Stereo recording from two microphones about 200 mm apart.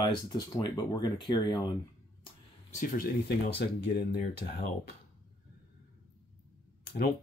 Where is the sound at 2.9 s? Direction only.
50° left (ahead or behind).